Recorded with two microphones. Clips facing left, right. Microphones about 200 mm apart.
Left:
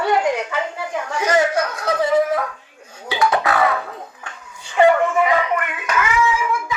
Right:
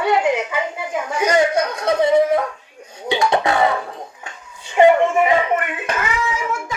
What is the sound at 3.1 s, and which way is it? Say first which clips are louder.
Music: right 1 dB; 25° right (ahead or behind).